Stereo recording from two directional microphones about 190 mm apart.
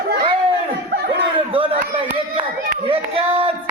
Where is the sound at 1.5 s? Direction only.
30° right (ahead or behind).